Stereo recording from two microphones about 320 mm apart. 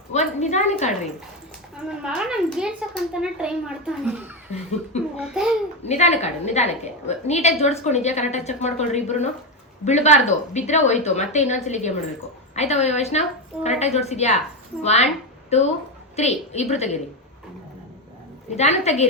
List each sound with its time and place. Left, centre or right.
0.1 s a woman's voice: left
1.9 s speech: centre
5.2 s speech: centre
5.9 s a woman's voice: centre
18.5 s a woman's voice: left